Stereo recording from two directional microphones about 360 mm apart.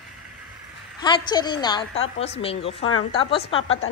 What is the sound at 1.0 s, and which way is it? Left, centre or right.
A woman's voice, centre.